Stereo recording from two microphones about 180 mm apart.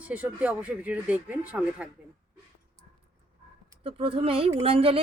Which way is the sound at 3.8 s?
30° right (ahead or behind).